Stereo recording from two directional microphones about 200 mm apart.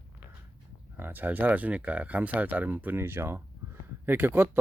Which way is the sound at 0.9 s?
10° right (ahead or behind).